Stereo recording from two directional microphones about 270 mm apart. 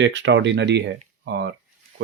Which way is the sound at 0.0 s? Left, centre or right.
Right.